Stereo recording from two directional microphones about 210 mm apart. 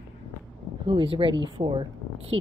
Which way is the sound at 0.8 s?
25° right (ahead or behind).